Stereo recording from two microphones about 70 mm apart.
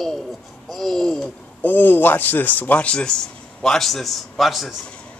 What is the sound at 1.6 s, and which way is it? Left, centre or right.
A man's voice, left.